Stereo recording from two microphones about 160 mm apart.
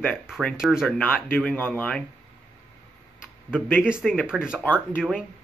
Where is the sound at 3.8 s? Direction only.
5° right (ahead or behind).